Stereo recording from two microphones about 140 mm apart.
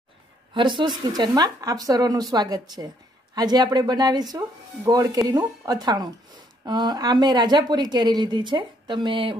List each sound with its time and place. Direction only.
0.6 s speech: 35° right (ahead or behind)